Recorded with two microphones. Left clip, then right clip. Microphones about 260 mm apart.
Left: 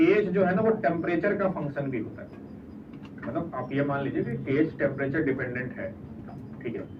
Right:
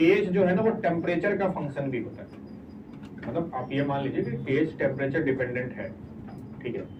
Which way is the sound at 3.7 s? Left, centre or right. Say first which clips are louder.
Left 1 dB; right.